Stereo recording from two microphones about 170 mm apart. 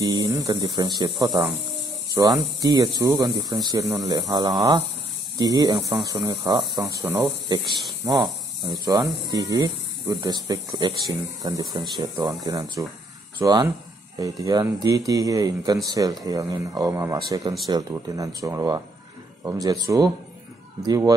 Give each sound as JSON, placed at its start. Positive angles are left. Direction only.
{"t": 0.0, "sound": "speech", "side_deg": -20}